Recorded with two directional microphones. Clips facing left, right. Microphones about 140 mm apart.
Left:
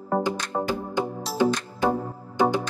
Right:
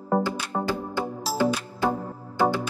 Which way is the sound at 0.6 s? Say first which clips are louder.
Left 2 dB; 20° left (ahead or behind).